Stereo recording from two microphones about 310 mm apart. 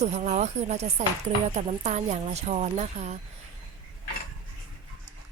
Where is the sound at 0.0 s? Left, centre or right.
Right.